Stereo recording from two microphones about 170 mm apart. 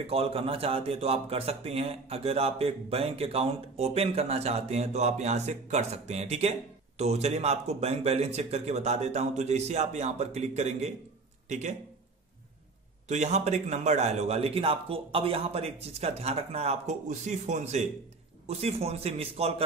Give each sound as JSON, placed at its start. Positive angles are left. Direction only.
{"t": 0.0, "sound": "a man's voice", "side_deg": -35}
{"t": 13.1, "sound": "a man's voice", "side_deg": -40}